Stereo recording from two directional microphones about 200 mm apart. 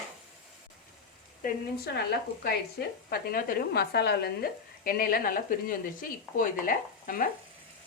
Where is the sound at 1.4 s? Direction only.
50° left (ahead or behind).